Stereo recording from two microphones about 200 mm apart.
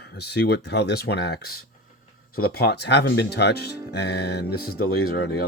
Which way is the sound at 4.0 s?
55° left (ahead or behind).